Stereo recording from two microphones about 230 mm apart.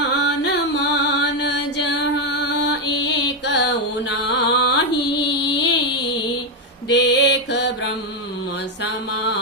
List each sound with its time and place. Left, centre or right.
0.0 s music: left
4.3 s carnatic music: left
6.8 s mantra: left
8.8 s mantra: left